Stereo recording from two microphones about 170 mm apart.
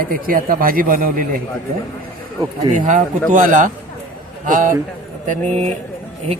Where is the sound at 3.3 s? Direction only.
50° right (ahead or behind).